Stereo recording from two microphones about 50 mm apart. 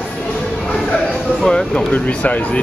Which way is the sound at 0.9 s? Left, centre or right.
Centre.